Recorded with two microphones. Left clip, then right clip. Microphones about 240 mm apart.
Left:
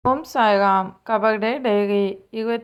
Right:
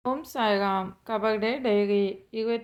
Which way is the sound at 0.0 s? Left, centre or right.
Centre.